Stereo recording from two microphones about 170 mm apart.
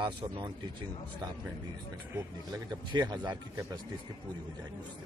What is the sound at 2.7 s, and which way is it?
A man's voice, 25° right (ahead or behind).